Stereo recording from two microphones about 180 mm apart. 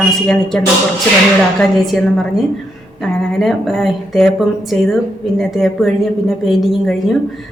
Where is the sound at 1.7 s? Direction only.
Centre (ahead or behind).